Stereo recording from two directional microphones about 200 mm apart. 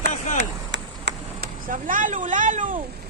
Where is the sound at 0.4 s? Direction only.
60° right (ahead or behind).